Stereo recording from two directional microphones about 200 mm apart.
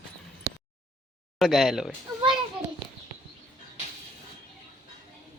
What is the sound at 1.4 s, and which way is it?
A child's voice, centre (ahead or behind).